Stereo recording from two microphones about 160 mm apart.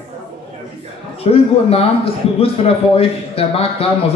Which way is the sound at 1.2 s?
35° left (ahead or behind).